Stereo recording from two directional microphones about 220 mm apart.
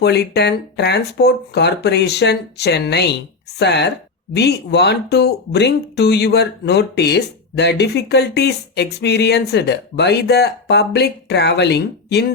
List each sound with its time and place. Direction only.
0.0 s speech: 50° left (ahead or behind)